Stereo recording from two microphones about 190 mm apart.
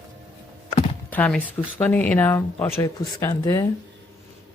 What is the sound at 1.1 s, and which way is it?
Speech, 5° left (ahead or behind).